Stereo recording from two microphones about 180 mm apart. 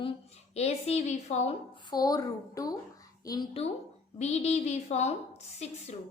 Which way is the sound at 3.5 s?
35° left (ahead or behind).